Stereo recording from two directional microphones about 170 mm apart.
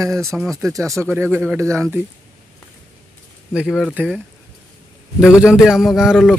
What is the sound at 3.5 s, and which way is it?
Speech, 5° right (ahead or behind).